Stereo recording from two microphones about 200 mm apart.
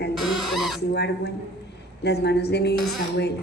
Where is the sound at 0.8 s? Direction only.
55° left (ahead or behind).